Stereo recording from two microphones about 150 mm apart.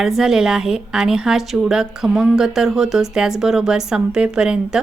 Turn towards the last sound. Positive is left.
turn(degrees=-5)  # may be behind; listen again after turning